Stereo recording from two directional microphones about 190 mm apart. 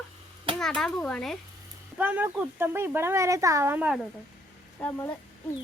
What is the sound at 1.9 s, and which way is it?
Speech, 10° right (ahead or behind).